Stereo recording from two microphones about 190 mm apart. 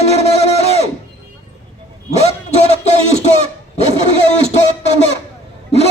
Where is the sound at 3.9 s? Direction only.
30° right (ahead or behind).